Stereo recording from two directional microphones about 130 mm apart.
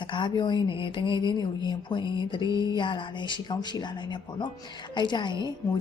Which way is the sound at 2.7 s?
40° left (ahead or behind).